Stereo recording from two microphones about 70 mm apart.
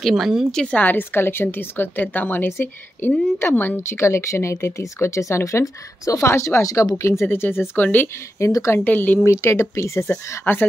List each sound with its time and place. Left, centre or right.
0.0 s a woman's voice: centre
0.5 s speech: centre
0.7 s a woman's voice: left
7.0 s a woman's voice: left
8.4 s speech: left
8.7 s a woman's voice: left
9.2 s speech: left
10.4 s a woman's voice: left